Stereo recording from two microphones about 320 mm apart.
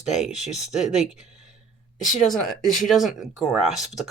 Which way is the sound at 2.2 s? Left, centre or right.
Centre.